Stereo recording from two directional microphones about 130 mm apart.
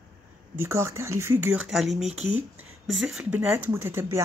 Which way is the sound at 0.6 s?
20° right (ahead or behind).